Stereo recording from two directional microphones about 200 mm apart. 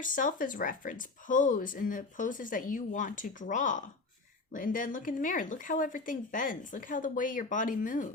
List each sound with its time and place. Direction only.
0.0 s speech: 40° left (ahead or behind)